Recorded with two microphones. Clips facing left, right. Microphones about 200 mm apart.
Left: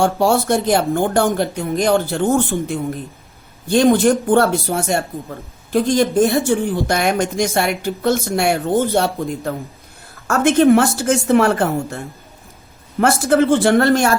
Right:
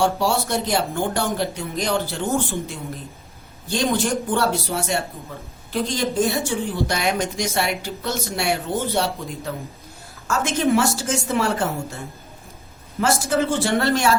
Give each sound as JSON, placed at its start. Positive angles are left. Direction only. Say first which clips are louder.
{"t": 0.0, "sound": "speech", "louder": "left 5 dB", "side_deg": 50}
{"t": 13.0, "sound": "speech", "louder": "left 6 dB", "side_deg": 60}